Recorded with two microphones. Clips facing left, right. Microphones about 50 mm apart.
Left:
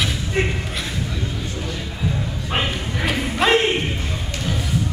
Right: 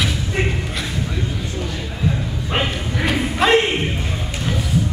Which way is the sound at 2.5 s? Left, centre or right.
Centre.